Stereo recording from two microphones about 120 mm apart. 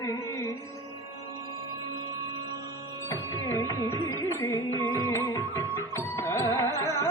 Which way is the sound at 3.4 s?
25° left (ahead or behind).